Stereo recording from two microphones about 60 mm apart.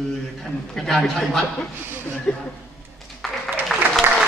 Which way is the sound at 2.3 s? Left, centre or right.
Centre.